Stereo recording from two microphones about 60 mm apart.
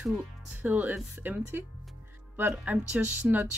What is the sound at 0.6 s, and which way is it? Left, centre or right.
Speech, right.